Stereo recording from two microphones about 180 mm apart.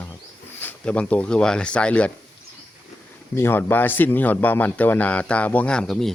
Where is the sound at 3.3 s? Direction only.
10° left (ahead or behind).